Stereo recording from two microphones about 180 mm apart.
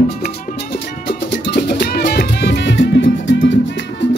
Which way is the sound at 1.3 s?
75° left (ahead or behind).